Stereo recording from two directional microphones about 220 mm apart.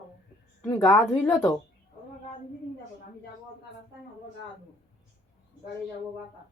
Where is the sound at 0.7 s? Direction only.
15° left (ahead or behind).